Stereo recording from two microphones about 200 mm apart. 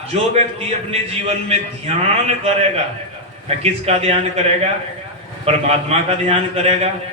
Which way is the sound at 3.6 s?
30° right (ahead or behind).